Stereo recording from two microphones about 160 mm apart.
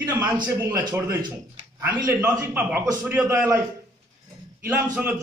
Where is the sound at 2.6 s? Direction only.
5° right (ahead or behind).